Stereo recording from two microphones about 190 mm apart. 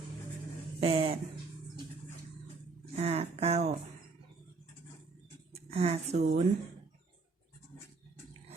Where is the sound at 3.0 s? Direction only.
30° right (ahead or behind).